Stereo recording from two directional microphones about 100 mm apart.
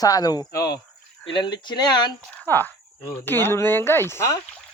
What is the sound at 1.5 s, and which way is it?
Speech, 45° left (ahead or behind).